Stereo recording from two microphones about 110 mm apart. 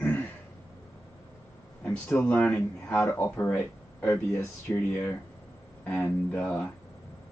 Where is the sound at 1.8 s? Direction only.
20° left (ahead or behind).